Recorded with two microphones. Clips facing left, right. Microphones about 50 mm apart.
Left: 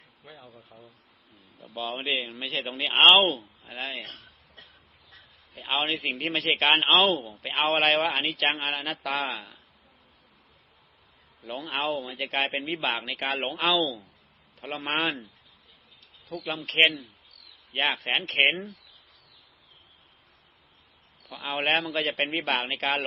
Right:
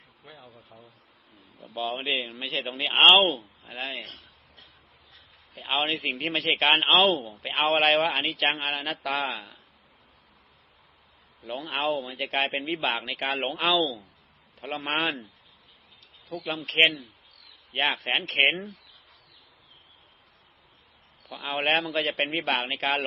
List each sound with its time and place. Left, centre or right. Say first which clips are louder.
0.2 s a man's voice: even; centre
4.0 s a sound: left 1 dB; left
5.5 s a man's voice: right 1 dB; centre
11.4 s a man's voice: right 1 dB; centre
16.3 s a man's voice: right 1 dB; centre
21.2 s a man's voice: right 1 dB; centre